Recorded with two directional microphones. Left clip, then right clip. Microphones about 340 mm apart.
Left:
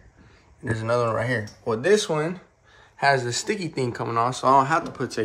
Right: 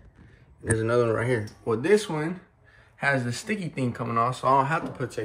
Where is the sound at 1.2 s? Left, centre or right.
Centre.